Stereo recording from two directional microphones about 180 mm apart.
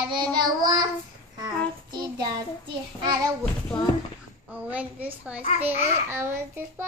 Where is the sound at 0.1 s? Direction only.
25° right (ahead or behind).